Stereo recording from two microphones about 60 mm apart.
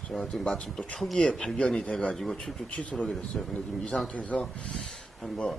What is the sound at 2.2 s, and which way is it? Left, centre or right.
Speech, centre.